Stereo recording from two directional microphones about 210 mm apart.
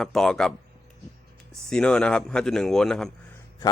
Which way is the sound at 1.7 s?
5° left (ahead or behind).